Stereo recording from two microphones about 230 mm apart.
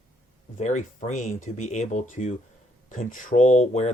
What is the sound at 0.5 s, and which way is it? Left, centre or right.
Speech, left.